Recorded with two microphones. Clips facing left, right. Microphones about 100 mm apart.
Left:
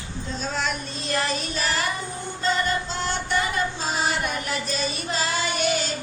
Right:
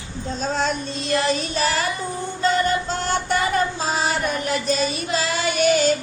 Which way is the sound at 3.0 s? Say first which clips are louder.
Right 4 dB; 45° right (ahead or behind).